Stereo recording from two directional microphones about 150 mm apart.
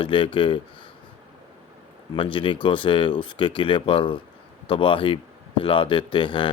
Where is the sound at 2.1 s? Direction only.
35° left (ahead or behind).